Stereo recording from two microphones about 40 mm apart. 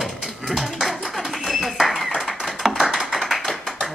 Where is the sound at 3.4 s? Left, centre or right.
Centre.